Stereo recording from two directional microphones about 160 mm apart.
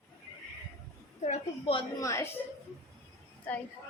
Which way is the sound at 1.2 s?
40° left (ahead or behind).